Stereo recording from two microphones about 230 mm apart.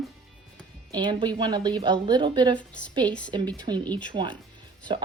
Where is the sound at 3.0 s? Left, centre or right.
Centre.